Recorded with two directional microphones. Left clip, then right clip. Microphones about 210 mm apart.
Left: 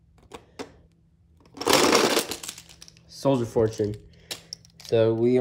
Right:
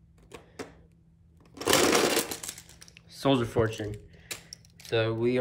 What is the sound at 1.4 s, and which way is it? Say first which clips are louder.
Crumpling: left 4 dB; centre (ahead or behind).